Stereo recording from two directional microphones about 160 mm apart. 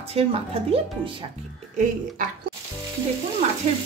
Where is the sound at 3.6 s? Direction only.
45° right (ahead or behind).